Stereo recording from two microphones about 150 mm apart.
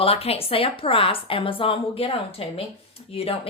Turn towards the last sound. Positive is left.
turn(degrees=40)  # may be behind; listen again after turning